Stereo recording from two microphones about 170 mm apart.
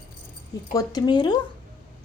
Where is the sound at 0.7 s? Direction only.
20° left (ahead or behind).